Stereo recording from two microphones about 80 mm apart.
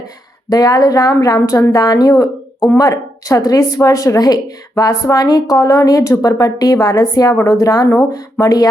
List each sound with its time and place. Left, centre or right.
0.5 s speech: left